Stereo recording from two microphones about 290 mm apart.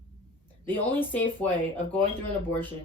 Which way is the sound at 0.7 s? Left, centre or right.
Centre.